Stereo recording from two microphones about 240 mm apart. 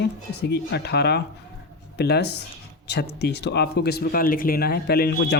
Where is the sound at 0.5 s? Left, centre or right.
Left.